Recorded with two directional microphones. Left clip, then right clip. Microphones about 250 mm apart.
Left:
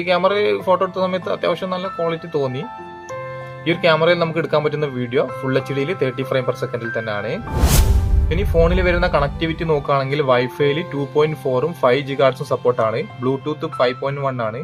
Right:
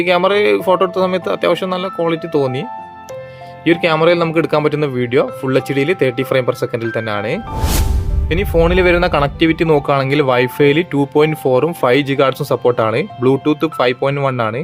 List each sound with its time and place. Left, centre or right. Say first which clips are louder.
0.0 s speech: right 4 dB; right
3.7 s speech: right 3 dB; right